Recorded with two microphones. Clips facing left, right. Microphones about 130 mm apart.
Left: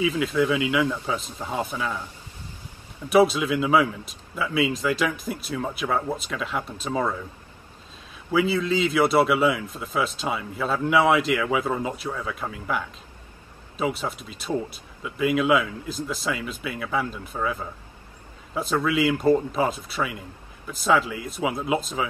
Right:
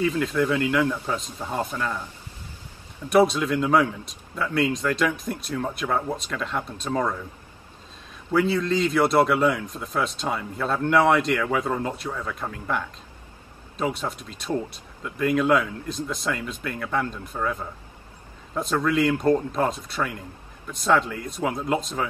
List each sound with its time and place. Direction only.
0.0 s a man's voice: 5° left (ahead or behind)
3.1 s speech: 5° left (ahead or behind)
8.3 s speech: 5° left (ahead or behind)